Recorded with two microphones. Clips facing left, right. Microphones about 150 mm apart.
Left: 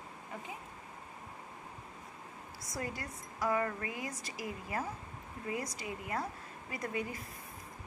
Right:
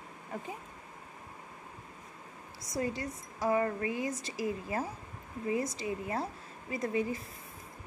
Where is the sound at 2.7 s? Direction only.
25° right (ahead or behind).